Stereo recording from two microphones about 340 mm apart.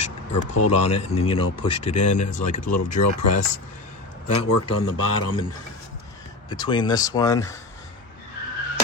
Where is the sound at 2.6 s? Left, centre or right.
Left.